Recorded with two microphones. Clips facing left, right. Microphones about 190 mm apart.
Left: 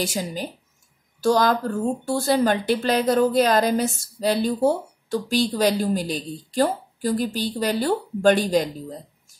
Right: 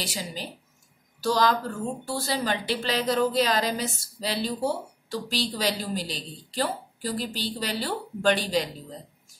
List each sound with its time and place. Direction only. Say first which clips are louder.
0.0 s a woman's voice: left 7 dB; 50° left (ahead or behind)